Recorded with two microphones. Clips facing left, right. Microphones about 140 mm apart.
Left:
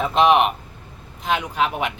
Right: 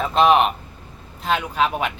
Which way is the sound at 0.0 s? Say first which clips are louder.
Even; 10° left (ahead or behind).